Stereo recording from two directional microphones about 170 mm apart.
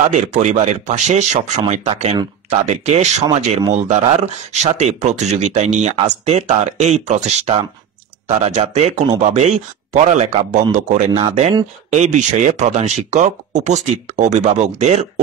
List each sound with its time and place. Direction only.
0.1 s speech: 45° right (ahead or behind)